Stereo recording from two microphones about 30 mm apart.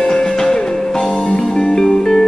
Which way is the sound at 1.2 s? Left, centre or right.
Left.